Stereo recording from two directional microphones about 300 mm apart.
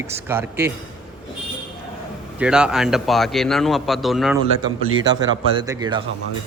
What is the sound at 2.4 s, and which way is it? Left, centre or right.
Speech, centre.